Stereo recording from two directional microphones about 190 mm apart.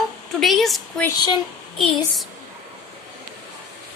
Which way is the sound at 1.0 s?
20° left (ahead or behind).